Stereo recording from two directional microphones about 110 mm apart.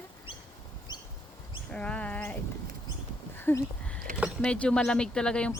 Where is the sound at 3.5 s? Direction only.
20° left (ahead or behind).